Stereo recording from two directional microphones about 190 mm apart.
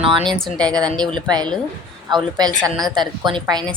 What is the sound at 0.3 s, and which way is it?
Speech, 5° left (ahead or behind).